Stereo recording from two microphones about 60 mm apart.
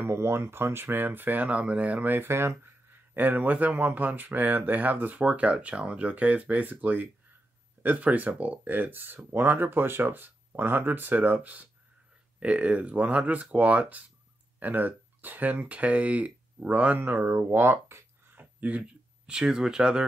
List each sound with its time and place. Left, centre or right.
0.0 s speech: right
3.2 s speech: right
17.5 s a sound: right
18.4 s speech: right